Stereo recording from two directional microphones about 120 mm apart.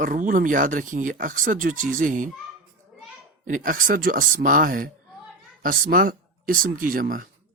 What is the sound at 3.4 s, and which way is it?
Speech, 90° right.